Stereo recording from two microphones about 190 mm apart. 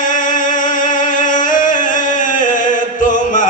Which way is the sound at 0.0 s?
45° left (ahead or behind).